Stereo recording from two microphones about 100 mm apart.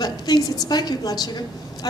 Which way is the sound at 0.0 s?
40° left (ahead or behind).